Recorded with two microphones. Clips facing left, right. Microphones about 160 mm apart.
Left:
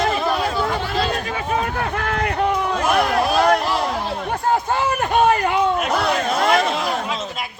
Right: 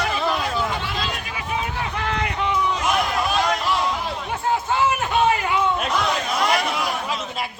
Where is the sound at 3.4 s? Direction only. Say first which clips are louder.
Left 4 dB; 55° left (ahead or behind).